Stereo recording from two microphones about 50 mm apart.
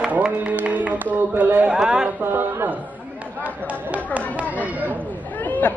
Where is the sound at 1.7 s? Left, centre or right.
Centre.